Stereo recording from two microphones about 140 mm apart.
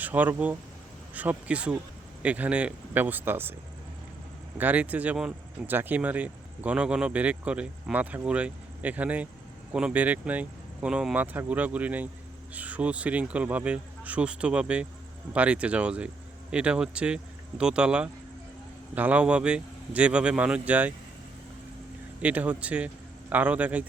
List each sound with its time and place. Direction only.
0.0 s speech: 10° right (ahead or behind)
4.5 s speech: 10° right (ahead or behind)
22.2 s speech: 10° right (ahead or behind)